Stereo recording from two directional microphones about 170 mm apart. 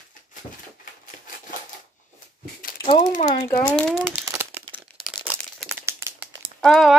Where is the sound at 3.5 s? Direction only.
10° left (ahead or behind).